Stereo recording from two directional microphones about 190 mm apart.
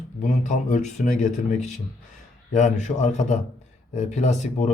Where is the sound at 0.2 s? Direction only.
40° left (ahead or behind).